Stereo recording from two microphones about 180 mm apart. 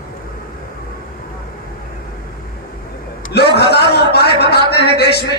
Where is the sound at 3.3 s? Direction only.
65° left (ahead or behind).